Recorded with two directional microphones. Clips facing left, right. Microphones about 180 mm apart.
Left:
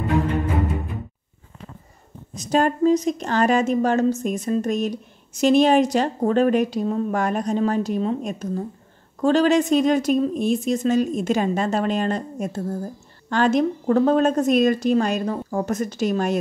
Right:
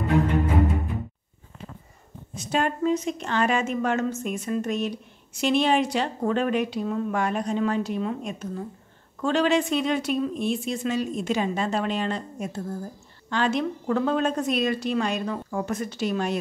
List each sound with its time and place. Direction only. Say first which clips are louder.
2.3 s a woman's voice: left 5 dB; 40° left (ahead or behind)